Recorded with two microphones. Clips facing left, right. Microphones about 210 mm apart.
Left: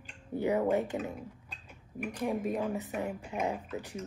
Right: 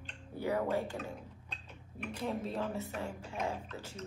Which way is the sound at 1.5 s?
10° left (ahead or behind).